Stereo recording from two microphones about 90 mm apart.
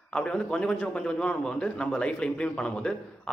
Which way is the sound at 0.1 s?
10° left (ahead or behind).